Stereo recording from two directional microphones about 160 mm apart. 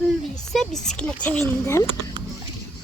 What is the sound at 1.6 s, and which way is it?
Speech, 20° left (ahead or behind).